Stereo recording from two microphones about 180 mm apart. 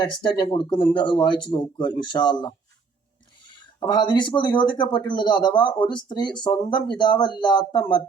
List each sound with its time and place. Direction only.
0.0 s speech: 25° left (ahead or behind)
3.8 s speech: 25° left (ahead or behind)